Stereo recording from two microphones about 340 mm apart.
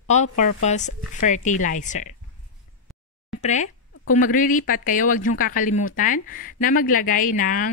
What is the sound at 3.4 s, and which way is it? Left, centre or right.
Speech, left.